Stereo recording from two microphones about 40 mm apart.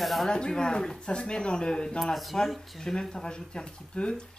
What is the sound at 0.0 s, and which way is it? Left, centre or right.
Speech, centre.